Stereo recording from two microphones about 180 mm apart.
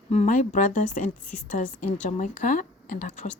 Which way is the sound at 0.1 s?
40° left (ahead or behind).